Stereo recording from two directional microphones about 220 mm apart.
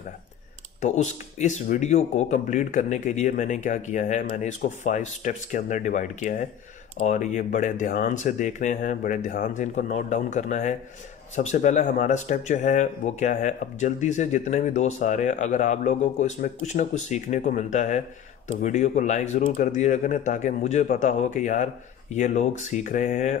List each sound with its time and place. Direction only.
0.7 s speech: 30° left (ahead or behind)